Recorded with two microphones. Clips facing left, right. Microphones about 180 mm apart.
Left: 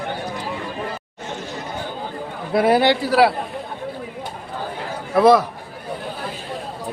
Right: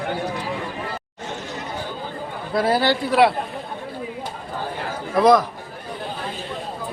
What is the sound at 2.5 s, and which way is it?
Speech, 20° left (ahead or behind).